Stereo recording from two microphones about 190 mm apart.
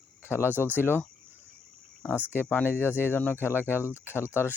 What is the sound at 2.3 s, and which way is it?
Speech, 10° left (ahead or behind).